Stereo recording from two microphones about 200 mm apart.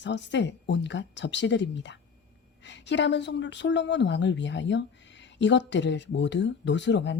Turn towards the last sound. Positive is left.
turn(degrees=60)  # may be behind; listen again after turning